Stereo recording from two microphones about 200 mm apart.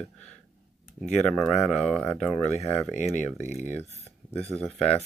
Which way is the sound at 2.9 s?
35° left (ahead or behind).